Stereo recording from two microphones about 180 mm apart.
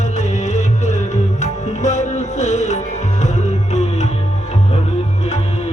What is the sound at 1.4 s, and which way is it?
Tabla, 40° left (ahead or behind).